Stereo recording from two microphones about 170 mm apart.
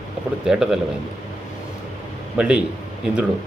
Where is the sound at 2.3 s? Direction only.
5° right (ahead or behind).